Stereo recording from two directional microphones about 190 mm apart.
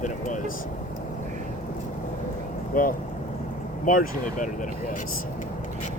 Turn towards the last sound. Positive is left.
turn(degrees=45)  # may be behind; listen again after turning